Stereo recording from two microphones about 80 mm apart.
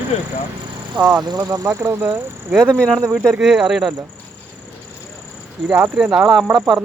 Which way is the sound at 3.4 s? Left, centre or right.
Centre.